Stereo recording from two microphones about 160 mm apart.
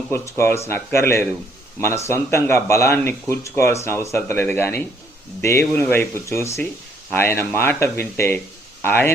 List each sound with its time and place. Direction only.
0.1 s speech: 15° left (ahead or behind)